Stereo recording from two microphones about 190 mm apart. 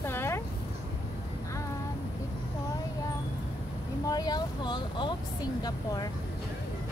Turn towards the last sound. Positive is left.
turn(degrees=20)  # may be behind; listen again after turning